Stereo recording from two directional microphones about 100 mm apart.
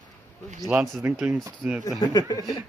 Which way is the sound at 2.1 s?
40° left (ahead or behind).